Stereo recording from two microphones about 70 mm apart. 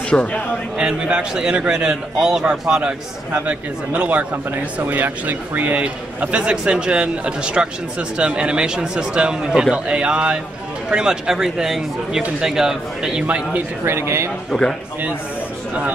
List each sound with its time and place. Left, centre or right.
0.1 s speech: left
0.7 s a man's voice: centre
3.3 s a man's voice: right
13.8 s speech: right
14.5 s a man's voice: centre